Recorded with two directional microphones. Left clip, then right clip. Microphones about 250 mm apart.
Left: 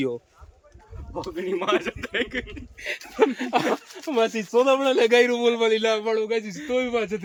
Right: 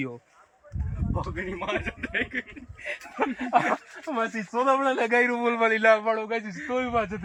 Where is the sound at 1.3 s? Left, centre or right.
Centre.